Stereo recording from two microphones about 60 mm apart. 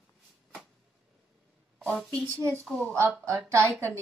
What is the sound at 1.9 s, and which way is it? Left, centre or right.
Speech, centre.